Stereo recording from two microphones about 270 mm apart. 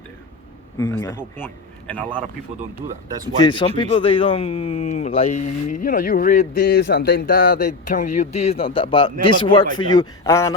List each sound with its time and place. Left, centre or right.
0.8 s a man's voice: centre
3.4 s a man's voice: centre